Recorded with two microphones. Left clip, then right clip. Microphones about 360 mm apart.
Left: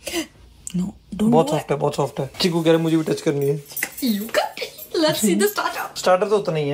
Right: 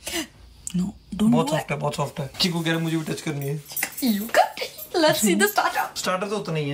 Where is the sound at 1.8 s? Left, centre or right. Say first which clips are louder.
Left 5 dB; centre.